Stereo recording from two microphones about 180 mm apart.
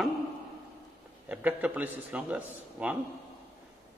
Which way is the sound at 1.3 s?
10° right (ahead or behind).